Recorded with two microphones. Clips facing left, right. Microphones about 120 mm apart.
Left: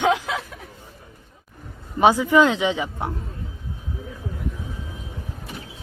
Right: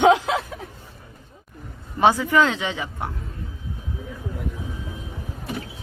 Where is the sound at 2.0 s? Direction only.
15° left (ahead or behind).